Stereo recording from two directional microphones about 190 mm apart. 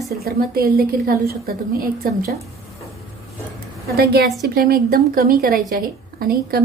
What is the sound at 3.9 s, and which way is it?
A woman's voice, 55° right (ahead or behind).